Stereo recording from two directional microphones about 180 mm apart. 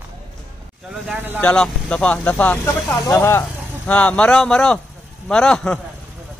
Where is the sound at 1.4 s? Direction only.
5° left (ahead or behind).